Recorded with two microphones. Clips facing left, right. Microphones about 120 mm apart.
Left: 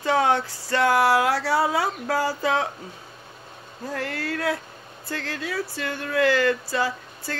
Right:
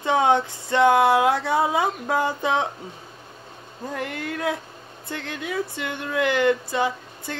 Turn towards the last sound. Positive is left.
turn(degrees=-20)  # may be behind; listen again after turning